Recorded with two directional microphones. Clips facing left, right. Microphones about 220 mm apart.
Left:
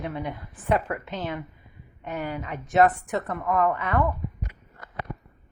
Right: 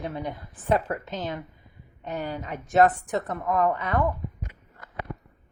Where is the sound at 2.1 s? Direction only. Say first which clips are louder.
Even; 35° right (ahead or behind).